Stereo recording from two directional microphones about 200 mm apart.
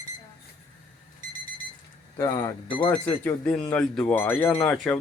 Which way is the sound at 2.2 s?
15° left (ahead or behind).